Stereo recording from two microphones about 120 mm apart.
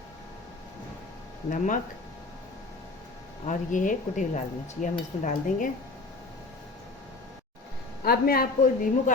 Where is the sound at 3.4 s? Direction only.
90° left.